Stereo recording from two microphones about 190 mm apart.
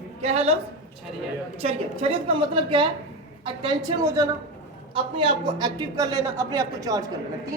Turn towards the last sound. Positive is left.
turn(degrees=-20)  # may be behind; listen again after turning